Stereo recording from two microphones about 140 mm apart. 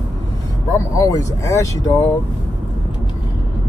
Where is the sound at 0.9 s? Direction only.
25° left (ahead or behind).